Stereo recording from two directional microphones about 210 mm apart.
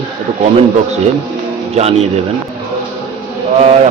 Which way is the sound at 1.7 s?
30° right (ahead or behind).